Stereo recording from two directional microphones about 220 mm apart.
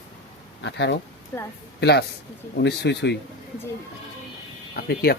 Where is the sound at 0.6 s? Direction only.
55° left (ahead or behind).